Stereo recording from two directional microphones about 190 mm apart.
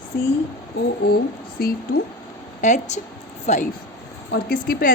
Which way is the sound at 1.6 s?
50° left (ahead or behind).